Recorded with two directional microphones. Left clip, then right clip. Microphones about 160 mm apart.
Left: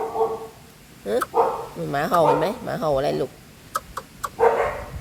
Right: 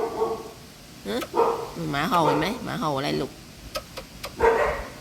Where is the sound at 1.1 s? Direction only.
45° left (ahead or behind).